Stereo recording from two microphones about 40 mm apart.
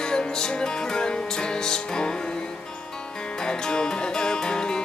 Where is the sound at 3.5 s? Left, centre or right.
Centre.